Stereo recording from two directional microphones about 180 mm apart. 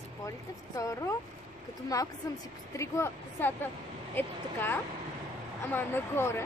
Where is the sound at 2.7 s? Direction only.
15° left (ahead or behind).